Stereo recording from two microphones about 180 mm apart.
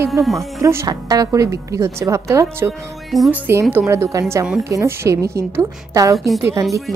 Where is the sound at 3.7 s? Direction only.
15° right (ahead or behind).